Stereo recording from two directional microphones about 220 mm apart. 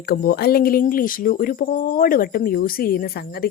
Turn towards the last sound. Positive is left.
turn(degrees=45)  # may be behind; listen again after turning